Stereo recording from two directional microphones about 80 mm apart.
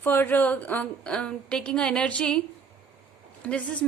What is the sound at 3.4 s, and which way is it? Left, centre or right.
Speech, centre.